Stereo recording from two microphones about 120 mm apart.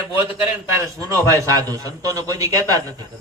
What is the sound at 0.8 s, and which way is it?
A man's voice, 30° right (ahead or behind).